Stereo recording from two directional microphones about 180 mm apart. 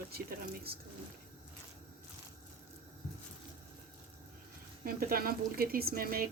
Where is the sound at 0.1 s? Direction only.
55° right (ahead or behind).